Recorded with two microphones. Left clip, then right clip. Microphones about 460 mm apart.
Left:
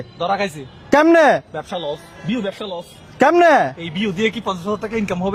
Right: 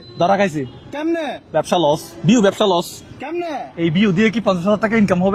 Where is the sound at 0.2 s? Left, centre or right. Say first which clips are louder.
Right 5 dB; right.